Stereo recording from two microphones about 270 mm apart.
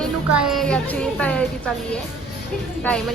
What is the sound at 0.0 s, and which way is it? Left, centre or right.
A woman's voice, centre.